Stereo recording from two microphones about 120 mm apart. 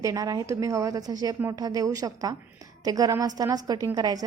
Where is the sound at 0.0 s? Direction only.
30° right (ahead or behind).